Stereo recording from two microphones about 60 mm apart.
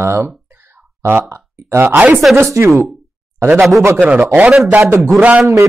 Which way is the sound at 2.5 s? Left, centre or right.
Right.